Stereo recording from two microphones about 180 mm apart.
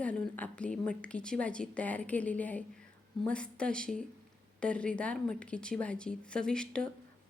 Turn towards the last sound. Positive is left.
turn(degrees=5)  # may be behind; listen again after turning